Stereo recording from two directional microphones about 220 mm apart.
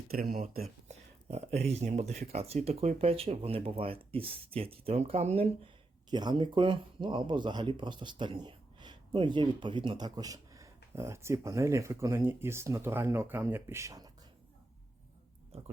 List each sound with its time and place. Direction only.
0.1 s speech: 40° right (ahead or behind); by 14.1 s 15° right (ahead or behind)